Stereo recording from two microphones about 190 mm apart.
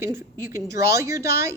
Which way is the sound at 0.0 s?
15° right (ahead or behind).